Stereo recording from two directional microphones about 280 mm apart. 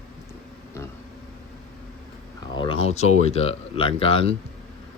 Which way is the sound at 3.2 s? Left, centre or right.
Left.